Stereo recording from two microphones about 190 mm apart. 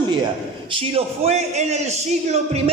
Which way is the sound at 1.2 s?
35° right (ahead or behind).